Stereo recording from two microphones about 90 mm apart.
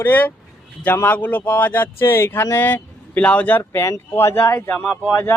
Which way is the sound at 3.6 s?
30° left (ahead or behind).